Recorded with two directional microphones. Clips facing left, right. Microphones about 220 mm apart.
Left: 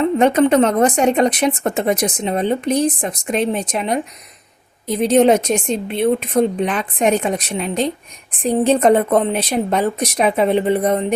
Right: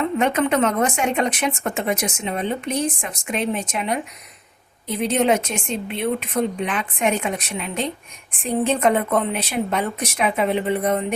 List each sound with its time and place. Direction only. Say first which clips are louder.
0.0 s speech: left 6 dB; 35° left (ahead or behind)